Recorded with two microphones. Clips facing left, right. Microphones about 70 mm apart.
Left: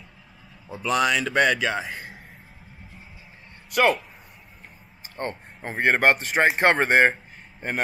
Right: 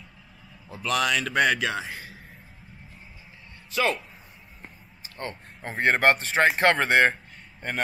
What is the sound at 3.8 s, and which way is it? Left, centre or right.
Speech, left.